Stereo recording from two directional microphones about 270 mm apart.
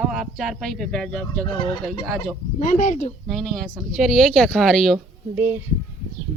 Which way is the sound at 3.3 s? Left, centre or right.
Centre.